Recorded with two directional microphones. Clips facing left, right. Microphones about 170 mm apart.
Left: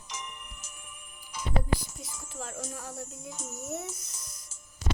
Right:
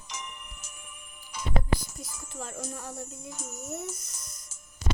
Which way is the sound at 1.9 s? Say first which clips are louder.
Right 1 dB; centre (ahead or behind).